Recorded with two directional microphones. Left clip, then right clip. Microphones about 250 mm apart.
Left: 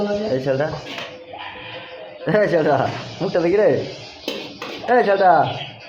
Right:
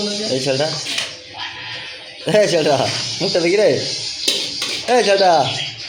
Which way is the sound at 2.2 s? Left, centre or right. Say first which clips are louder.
Right 2 dB; centre.